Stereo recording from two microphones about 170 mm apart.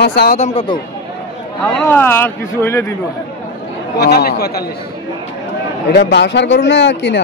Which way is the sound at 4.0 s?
70° left (ahead or behind).